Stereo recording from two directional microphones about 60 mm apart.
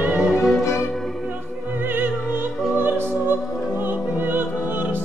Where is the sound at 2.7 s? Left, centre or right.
Right.